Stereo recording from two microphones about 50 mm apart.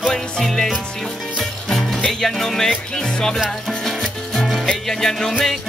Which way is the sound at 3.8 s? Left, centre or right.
Centre.